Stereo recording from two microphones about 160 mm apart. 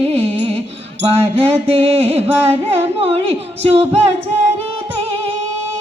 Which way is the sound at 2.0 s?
40° right (ahead or behind).